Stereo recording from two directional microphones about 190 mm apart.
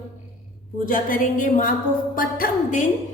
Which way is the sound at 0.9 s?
45° left (ahead or behind).